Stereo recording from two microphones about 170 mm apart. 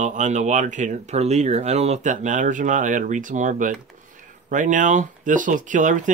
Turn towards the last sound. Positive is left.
turn(degrees=-50)  # may be behind; listen again after turning